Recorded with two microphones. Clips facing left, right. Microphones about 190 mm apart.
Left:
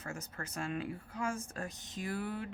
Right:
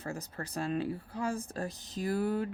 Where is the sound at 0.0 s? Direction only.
35° right (ahead or behind).